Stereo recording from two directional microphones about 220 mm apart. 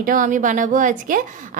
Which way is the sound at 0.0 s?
35° right (ahead or behind).